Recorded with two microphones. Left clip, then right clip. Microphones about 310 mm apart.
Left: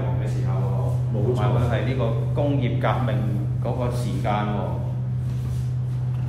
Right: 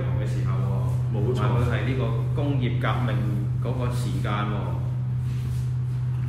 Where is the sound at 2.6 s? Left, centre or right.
Left.